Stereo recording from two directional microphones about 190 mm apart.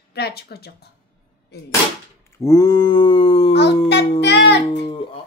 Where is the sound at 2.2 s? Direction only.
15° left (ahead or behind).